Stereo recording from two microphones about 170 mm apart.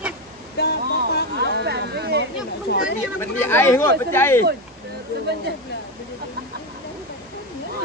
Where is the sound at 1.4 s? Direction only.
80° right.